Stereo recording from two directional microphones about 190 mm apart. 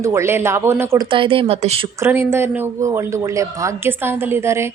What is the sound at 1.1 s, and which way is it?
Speech, 25° right (ahead or behind).